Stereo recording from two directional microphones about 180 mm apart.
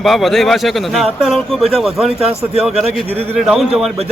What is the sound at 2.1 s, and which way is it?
Speech, 35° right (ahead or behind).